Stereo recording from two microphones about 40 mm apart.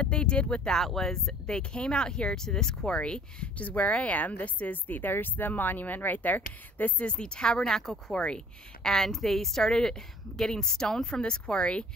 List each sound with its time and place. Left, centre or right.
0.0 s speech: left
0.7 s a woman's voice: centre
1.5 s a woman's voice: left
2.9 s speech: left
7.1 s speech: left
8.1 s speech: left
8.8 s a woman's voice: centre